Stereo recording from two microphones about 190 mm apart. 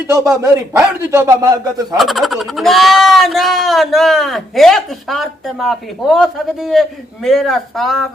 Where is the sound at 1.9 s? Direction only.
Centre (ahead or behind).